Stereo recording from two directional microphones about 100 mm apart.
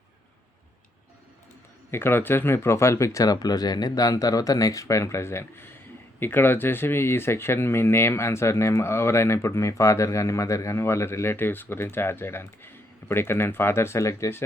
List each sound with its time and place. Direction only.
1.9 s speech: 25° left (ahead or behind)